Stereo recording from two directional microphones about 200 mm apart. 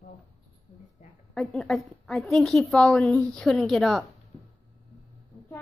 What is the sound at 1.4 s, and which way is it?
A woman's voice, centre (ahead or behind).